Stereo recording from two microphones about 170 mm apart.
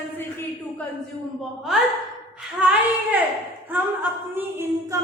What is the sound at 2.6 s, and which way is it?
Child singing, 5° right (ahead or behind).